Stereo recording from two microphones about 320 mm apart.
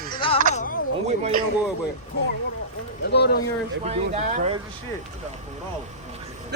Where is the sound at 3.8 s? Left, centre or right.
Centre.